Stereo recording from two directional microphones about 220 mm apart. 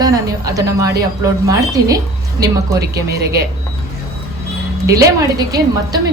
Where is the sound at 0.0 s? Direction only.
15° right (ahead or behind).